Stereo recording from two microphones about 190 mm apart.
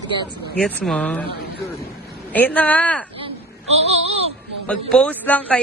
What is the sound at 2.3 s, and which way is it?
Speech, 10° left (ahead or behind).